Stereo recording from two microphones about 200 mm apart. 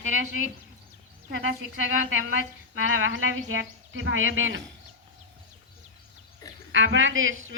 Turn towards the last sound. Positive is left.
turn(degrees=-80)